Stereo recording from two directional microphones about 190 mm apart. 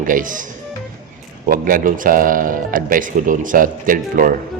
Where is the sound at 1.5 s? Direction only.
45° right (ahead or behind).